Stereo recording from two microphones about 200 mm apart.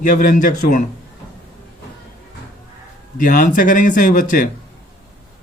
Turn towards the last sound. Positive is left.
turn(degrees=40)  # may be behind; listen again after turning